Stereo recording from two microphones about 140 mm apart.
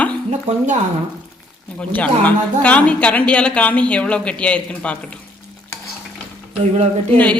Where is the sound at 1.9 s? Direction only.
10° left (ahead or behind).